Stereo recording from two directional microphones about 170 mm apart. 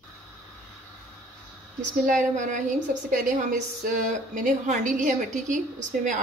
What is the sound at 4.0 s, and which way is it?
A woman's voice, 50° right (ahead or behind).